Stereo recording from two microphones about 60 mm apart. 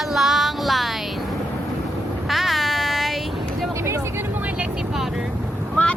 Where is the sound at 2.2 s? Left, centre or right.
Centre.